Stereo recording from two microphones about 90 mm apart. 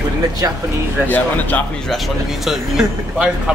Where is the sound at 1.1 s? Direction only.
20° left (ahead or behind).